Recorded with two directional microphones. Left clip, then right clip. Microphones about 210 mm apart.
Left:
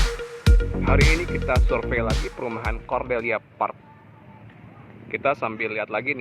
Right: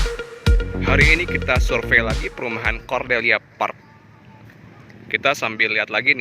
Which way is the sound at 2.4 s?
25° right (ahead or behind).